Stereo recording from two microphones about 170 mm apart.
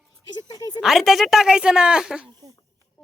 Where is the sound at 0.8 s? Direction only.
Centre (ahead or behind).